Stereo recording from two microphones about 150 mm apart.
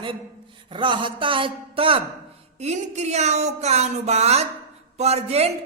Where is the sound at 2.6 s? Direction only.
50° right (ahead or behind).